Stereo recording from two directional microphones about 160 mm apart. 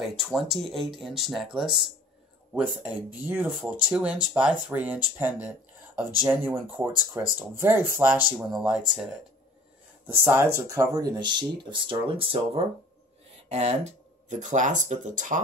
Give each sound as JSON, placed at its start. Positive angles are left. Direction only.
{"t": 0.1, "sound": "speech", "side_deg": 0}